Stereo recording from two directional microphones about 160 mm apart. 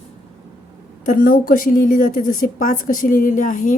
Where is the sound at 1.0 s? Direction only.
60° left (ahead or behind).